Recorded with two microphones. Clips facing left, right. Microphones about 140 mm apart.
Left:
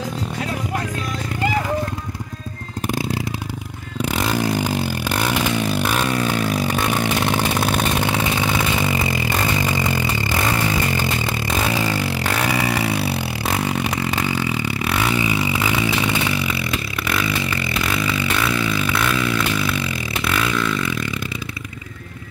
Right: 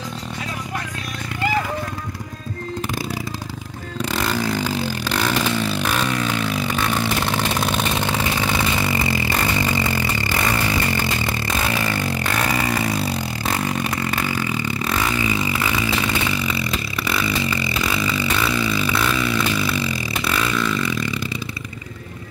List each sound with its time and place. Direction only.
4.4 s vehicle: 15° left (ahead or behind)
6.2 s vehicle: 45° left (ahead or behind)
6.9 s vehicle: 15° left (ahead or behind)
8.8 s scrape: 15° left (ahead or behind)
9.7 s vehicle: 15° left (ahead or behind)
11.3 s vehicle: 10° left (ahead or behind)
13.0 s a sound: 10° left (ahead or behind)
16.3 s vehicle: 5° left (ahead or behind)
17.7 s a sound: centre (ahead or behind)